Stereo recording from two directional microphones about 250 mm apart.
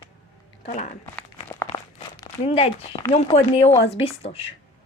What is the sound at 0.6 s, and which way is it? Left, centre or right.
Speech, left.